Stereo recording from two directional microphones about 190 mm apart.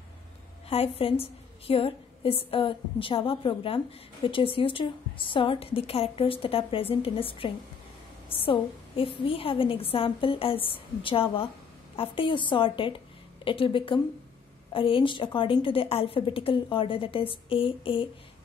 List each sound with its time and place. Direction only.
0.7 s a woman's voice: 30° left (ahead or behind)